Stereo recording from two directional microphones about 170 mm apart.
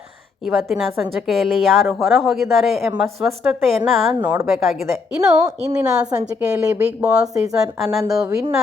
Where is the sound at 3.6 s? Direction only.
Centre (ahead or behind).